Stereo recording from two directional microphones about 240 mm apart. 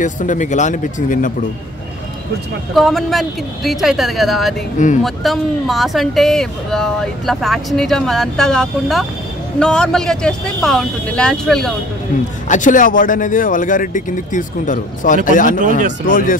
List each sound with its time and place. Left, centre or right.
0.0 s speech: left
2.7 s speech: centre
12.4 s speech: left
15.6 s speech: right
16.1 s speech: left